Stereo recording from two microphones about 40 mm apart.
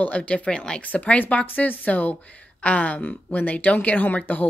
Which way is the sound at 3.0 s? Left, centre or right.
Left.